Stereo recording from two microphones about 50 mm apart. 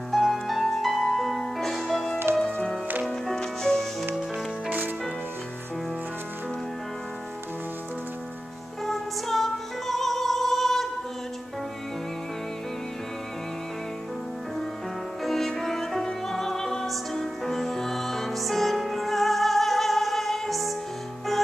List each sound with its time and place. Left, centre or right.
0.1 s music: centre
2.3 s music: right
3.1 s music: centre
8.8 s music: centre
15.2 s music: centre